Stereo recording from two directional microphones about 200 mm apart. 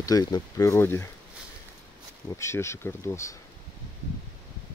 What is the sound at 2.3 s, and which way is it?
Speech, 15° left (ahead or behind).